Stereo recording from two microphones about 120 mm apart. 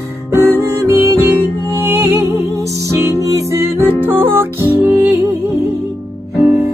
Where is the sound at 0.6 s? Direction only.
20° right (ahead or behind).